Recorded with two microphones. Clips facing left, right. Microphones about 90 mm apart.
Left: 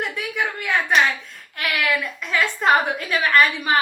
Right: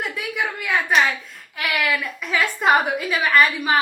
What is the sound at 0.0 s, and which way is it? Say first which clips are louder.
A woman's voice: left 1 dB; centre (ahead or behind).